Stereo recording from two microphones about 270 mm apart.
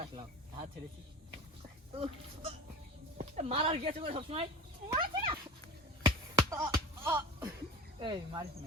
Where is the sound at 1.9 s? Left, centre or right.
Right.